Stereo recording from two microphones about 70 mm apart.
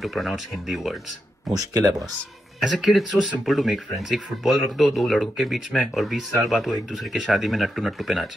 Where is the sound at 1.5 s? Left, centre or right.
Right.